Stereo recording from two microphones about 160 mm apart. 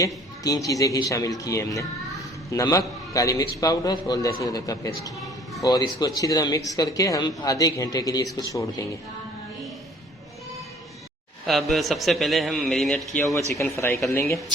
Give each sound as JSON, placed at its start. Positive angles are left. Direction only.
{"t": 0.0, "sound": "a man's voice", "side_deg": 20}
{"t": 11.4, "sound": "a man's voice", "side_deg": 0}
{"t": 13.7, "sound": "speech", "side_deg": 15}